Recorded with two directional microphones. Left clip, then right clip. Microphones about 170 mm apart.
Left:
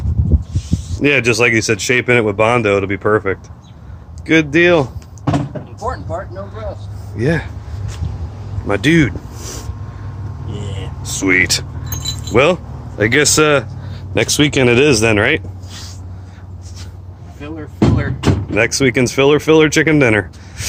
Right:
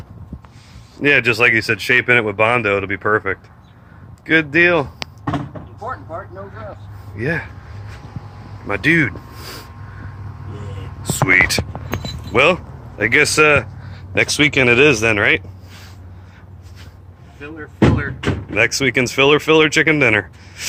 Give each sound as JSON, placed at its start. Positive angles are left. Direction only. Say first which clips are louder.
{"t": 1.0, "sound": "speech", "louder": "left 1 dB", "side_deg": 15}
{"t": 5.8, "sound": "a sound", "louder": "left 5 dB", "side_deg": 25}
{"t": 7.2, "sound": "speech", "louder": "left 4 dB", "side_deg": 25}
{"t": 8.6, "sound": "speech", "louder": "left 2 dB", "side_deg": 25}
{"t": 11.0, "sound": "whispering", "louder": "even", "side_deg": 15}
{"t": 12.3, "sound": "speech", "louder": "left 1 dB", "side_deg": 30}
{"t": 17.7, "sound": "speech", "louder": "even", "side_deg": 65}
{"t": 18.5, "sound": "speech", "louder": "left 1 dB", "side_deg": 20}